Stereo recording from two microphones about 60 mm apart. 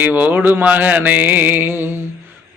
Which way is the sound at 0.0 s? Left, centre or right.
Right.